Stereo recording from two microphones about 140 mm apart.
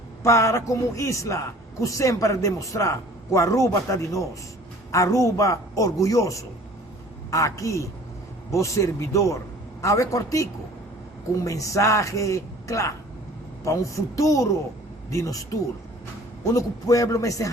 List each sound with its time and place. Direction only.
0.2 s a man's voice: 20° left (ahead or behind)
14.2 s a man's voice: 20° left (ahead or behind)
16.6 s a man's voice: 25° left (ahead or behind)